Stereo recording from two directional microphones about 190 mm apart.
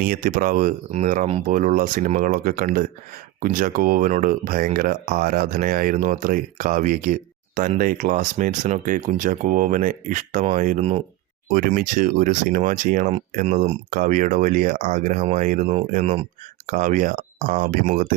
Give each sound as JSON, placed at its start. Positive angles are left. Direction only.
{"t": 0.0, "sound": "speech", "side_deg": -50}
{"t": 11.5, "sound": "speech", "side_deg": -45}